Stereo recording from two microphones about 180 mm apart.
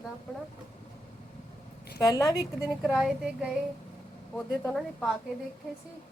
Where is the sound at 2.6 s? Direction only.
5° right (ahead or behind).